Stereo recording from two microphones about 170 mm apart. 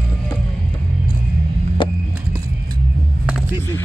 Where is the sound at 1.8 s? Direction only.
30° left (ahead or behind).